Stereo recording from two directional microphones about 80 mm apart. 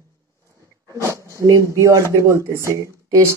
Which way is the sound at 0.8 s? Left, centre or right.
Right.